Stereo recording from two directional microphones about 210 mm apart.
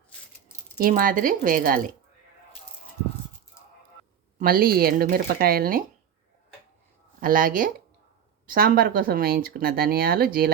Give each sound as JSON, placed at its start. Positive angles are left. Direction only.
{"t": 0.8, "sound": "speech", "side_deg": -40}
{"t": 4.4, "sound": "speech", "side_deg": -45}
{"t": 7.2, "sound": "speech", "side_deg": -40}